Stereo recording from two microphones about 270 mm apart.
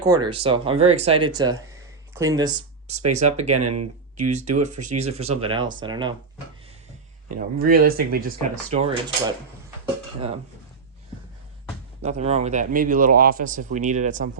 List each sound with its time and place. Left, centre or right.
0.0 s speech: centre
3.6 s speech: right
4.2 s speech: right
7.3 s speech: right
8.7 s speech: right
12.0 s speech: right